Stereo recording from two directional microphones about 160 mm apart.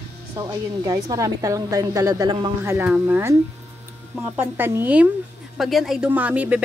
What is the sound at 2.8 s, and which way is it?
Speech, 10° right (ahead or behind).